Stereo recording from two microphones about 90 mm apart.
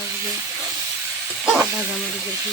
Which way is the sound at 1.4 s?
15° right (ahead or behind).